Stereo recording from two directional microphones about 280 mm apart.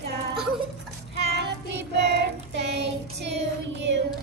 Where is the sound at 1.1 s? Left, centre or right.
Right.